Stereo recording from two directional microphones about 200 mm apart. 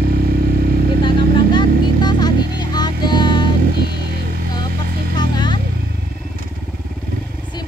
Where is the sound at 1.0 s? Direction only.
25° left (ahead or behind).